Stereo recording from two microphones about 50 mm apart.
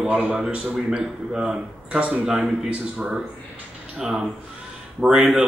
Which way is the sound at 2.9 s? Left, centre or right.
Centre.